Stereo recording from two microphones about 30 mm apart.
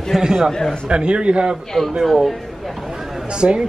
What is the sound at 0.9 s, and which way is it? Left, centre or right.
Speech, right.